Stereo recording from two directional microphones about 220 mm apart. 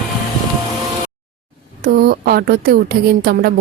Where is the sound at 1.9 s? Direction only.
45° right (ahead or behind).